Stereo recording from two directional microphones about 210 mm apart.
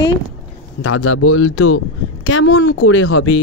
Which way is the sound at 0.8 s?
90° left.